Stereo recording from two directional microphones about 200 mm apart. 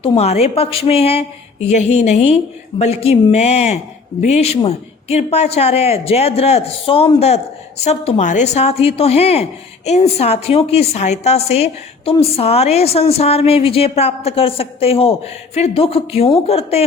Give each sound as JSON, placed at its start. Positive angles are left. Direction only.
{"t": 0.0, "sound": "a woman's voice", "side_deg": 30}